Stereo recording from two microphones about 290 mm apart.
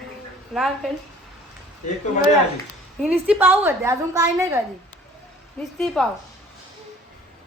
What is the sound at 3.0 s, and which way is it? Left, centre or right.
A woman's voice, centre.